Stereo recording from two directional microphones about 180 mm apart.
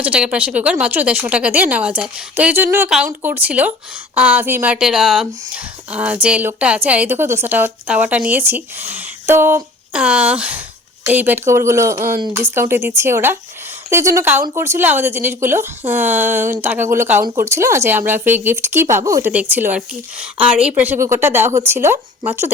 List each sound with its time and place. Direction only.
0.0 s a woman's voice: 5° right (ahead or behind)